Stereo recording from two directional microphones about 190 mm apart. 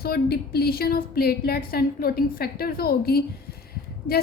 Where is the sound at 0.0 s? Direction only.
55° left (ahead or behind).